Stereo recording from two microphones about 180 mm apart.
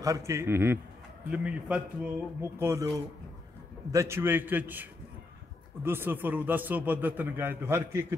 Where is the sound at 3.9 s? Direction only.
15° right (ahead or behind).